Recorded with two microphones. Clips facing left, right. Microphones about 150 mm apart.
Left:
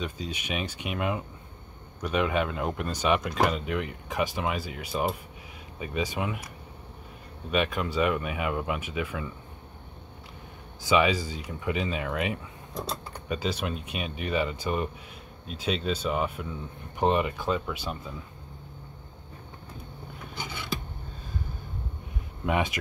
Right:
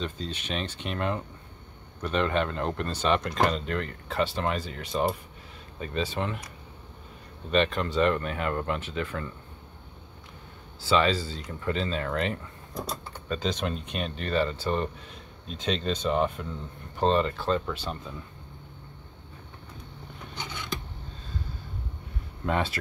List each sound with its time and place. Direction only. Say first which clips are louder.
0.0 s speech: even; 10° left (ahead or behind)
7.5 s speech: right 2 dB; 10° left (ahead or behind)
10.8 s speech: left 1 dB; 15° left (ahead or behind)
20.3 s scissors: left 1 dB; 10° left (ahead or behind)
22.5 s speech: left 1 dB; 15° left (ahead or behind)